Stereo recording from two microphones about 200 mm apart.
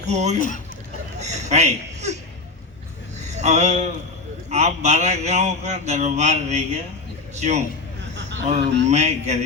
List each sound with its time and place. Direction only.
0.1 s a man's voice: 35° right (ahead or behind)
0.3 s speech: 40° left (ahead or behind)
1.2 s chuckle: 35° right (ahead or behind)
3.3 s a man's voice: 35° right (ahead or behind)